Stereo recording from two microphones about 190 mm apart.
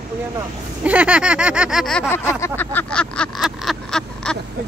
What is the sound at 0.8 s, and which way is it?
Speech, 5° right (ahead or behind).